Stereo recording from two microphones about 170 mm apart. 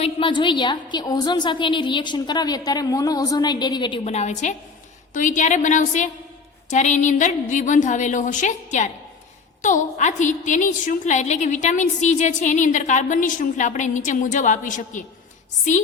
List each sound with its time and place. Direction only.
0.0 s a woman's voice: 30° left (ahead or behind); by 15.0 s 50° left (ahead or behind)